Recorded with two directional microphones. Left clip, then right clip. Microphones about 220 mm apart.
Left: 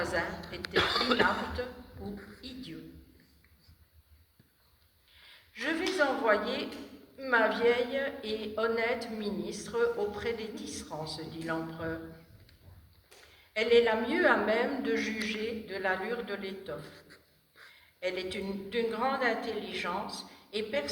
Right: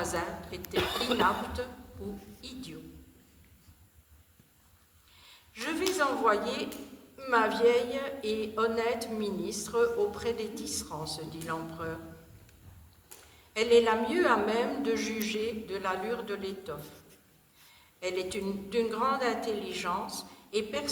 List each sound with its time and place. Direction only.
0.0 s a sound: 55° right (ahead or behind)
0.8 s speech: centre (ahead or behind)
1.6 s a woman's voice: 55° right (ahead or behind)
2.4 s music: 55° right (ahead or behind)
5.1 s a sound: 55° right (ahead or behind)
7.2 s a woman's voice: 55° right (ahead or behind)
13.5 s a woman's voice: 55° right (ahead or behind)
18.0 s a woman's voice: 55° right (ahead or behind)